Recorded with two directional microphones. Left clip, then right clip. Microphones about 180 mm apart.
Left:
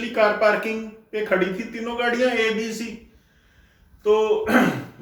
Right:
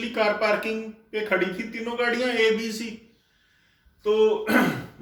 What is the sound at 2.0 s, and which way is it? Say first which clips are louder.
Speech: left 3 dB; 35° right (ahead or behind).